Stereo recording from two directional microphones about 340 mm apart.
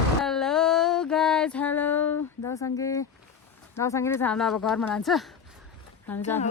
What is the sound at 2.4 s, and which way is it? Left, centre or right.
A woman's voice, centre.